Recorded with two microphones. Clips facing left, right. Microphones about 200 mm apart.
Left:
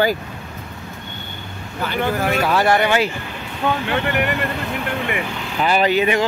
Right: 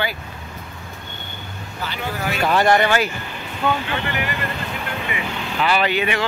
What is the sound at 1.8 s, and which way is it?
Speech, 50° left (ahead or behind).